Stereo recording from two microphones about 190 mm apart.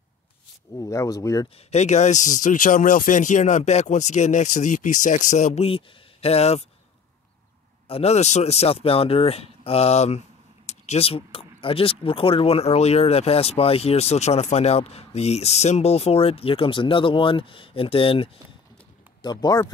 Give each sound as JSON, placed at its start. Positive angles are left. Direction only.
{"t": 0.7, "sound": "speech", "side_deg": 15}
{"t": 1.7, "sound": "speech", "side_deg": 35}
{"t": 7.9, "sound": "speech", "side_deg": 35}